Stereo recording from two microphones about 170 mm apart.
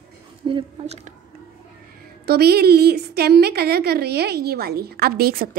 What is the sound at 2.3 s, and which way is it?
A woman's voice, 70° right (ahead or behind).